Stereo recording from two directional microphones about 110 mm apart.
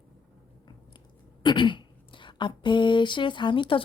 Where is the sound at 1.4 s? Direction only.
45° left (ahead or behind).